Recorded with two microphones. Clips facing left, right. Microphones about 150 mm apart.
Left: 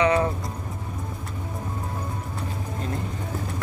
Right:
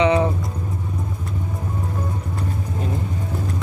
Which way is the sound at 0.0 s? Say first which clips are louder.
Right 3 dB; 20° right (ahead or behind).